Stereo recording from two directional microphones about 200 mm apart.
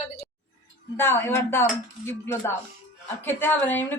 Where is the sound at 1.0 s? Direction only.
10° left (ahead or behind).